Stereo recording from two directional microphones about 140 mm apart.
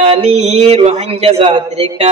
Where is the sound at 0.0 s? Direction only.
45° right (ahead or behind).